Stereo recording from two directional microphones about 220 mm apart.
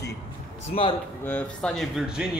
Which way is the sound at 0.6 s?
25° left (ahead or behind).